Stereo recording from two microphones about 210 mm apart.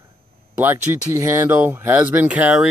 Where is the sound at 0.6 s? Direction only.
10° right (ahead or behind).